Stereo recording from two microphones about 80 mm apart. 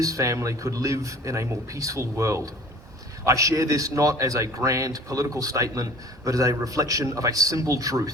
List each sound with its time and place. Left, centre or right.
0.0 s a man's voice: right